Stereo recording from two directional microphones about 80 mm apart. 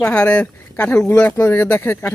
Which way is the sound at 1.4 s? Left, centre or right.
Left.